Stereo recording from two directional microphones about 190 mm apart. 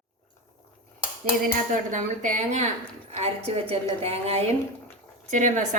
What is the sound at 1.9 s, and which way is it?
A woman's voice, 40° right (ahead or behind).